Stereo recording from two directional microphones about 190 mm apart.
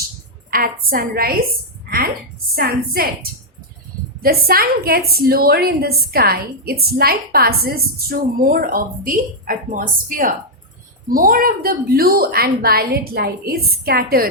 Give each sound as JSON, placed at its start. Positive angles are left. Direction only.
{"t": 0.5, "sound": "a woman's voice", "side_deg": -50}
{"t": 2.6, "sound": "a woman's voice", "side_deg": -50}
{"t": 4.2, "sound": "a woman's voice", "side_deg": -50}